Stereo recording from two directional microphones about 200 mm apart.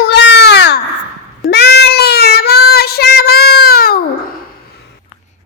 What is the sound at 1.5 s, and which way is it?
Child singing, 55° left (ahead or behind).